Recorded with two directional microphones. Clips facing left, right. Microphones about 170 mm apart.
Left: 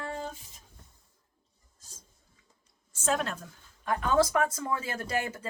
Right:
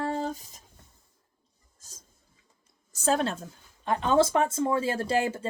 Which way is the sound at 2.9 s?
35° right (ahead or behind).